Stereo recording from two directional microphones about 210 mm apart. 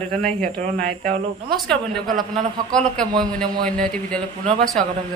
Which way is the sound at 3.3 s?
5° left (ahead or behind).